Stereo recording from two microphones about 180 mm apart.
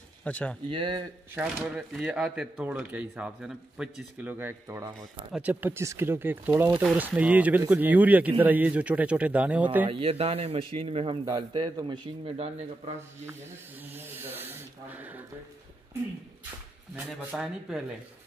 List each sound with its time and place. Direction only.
0.2 s speech: 5° left (ahead or behind)
0.7 s a man's voice: 30° right (ahead or behind)
1.3 s speech: 5° right (ahead or behind)
9.8 s a man's voice: 30° right (ahead or behind)
13.2 s speech: 15° right (ahead or behind)
16.9 s speech: 5° right (ahead or behind)